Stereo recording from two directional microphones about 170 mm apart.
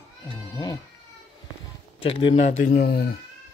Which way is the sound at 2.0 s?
30° left (ahead or behind).